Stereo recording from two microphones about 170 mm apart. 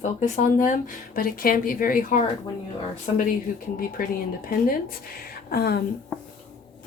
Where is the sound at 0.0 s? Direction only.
45° left (ahead or behind).